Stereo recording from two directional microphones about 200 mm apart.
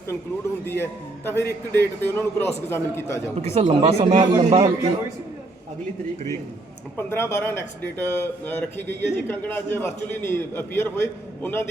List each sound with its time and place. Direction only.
0.6 s speech: 10° left (ahead or behind)
3.4 s speech: 30° right (ahead or behind)
6.9 s speech: 10° left (ahead or behind)